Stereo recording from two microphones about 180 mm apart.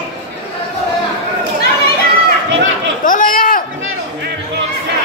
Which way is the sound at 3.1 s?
50° left (ahead or behind).